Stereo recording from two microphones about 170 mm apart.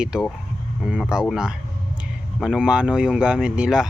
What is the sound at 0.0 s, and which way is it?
Speech, 5° right (ahead or behind).